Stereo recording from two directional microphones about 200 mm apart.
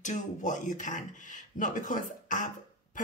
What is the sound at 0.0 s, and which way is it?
Speech, 40° left (ahead or behind).